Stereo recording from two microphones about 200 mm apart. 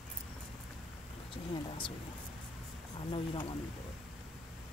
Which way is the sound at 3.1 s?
25° left (ahead or behind).